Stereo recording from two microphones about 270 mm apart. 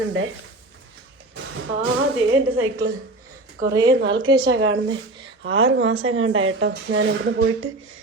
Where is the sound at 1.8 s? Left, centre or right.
Right.